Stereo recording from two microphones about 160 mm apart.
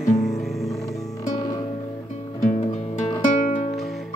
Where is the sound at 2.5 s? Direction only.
50° left (ahead or behind).